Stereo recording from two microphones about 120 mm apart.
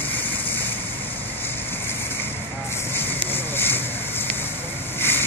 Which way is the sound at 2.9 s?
15° left (ahead or behind).